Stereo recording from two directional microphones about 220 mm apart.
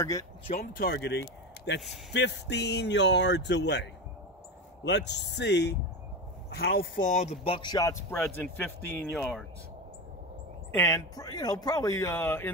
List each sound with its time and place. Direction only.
0.0 s speech: 15° left (ahead or behind)
0.5 s a man's voice: 35° left (ahead or behind); by 9.5 s 5° left (ahead or behind)
10.7 s speech: 10° left (ahead or behind)